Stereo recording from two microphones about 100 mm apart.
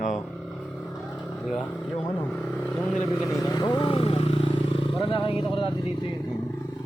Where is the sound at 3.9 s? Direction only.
70° left (ahead or behind).